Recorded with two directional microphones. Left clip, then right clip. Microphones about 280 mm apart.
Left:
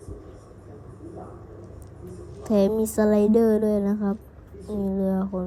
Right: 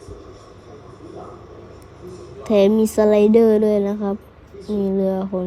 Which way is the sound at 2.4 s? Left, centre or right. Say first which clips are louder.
Right 7 dB; right.